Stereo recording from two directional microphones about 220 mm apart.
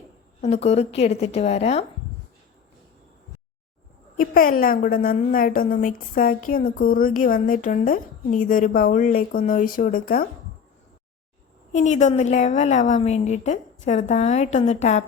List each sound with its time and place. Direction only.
0.4 s a woman's voice: 30° left (ahead or behind)
4.2 s a woman's voice: 40° left (ahead or behind)
11.7 s a woman's voice: 30° left (ahead or behind)